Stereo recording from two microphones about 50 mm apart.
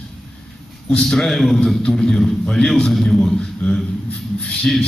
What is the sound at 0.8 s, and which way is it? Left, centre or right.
A man's voice, centre.